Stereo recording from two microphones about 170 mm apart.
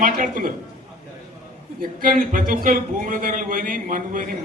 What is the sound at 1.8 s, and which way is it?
Speech, 55° right (ahead or behind).